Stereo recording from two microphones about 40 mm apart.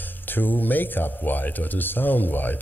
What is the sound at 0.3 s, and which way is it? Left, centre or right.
Speech, left.